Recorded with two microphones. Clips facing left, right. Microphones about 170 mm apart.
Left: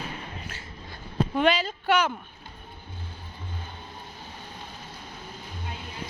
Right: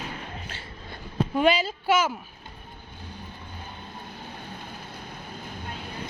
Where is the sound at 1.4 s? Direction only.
10° right (ahead or behind).